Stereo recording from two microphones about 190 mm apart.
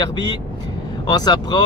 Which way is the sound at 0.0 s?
20° left (ahead or behind).